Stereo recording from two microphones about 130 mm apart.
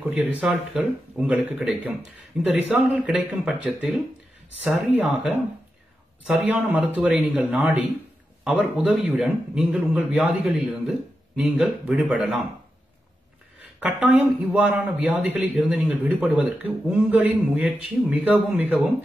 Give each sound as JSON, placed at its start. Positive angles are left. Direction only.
{"t": 0.0, "sound": "a man's voice", "side_deg": -10}
{"t": 13.7, "sound": "a man's voice", "side_deg": -10}